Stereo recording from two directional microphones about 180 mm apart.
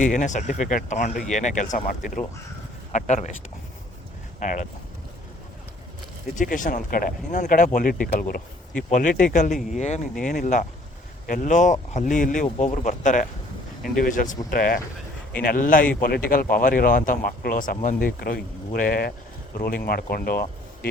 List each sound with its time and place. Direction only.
0.0 s speech: 45° left (ahead or behind)
2.9 s speech: 40° left (ahead or behind)
4.4 s speech: 45° left (ahead or behind)
6.3 s speech: 45° left (ahead or behind)